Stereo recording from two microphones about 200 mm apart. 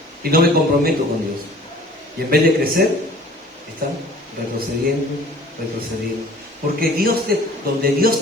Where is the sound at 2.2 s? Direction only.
50° right (ahead or behind).